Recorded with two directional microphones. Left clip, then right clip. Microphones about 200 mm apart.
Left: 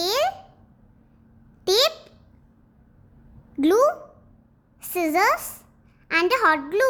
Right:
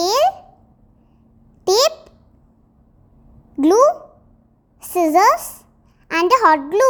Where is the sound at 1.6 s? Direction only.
15° right (ahead or behind).